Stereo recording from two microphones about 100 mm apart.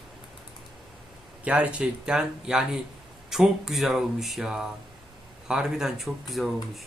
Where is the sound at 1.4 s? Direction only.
10° right (ahead or behind).